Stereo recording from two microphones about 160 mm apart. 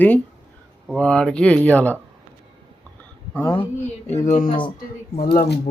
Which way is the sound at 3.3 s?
10° left (ahead or behind).